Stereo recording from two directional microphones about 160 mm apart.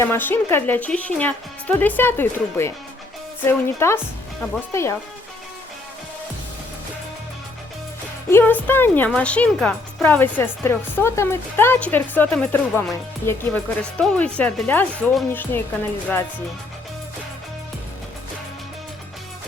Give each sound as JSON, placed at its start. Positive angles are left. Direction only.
{"t": 0.0, "sound": "speech", "side_deg": 15}
{"t": 8.3, "sound": "speech", "side_deg": 10}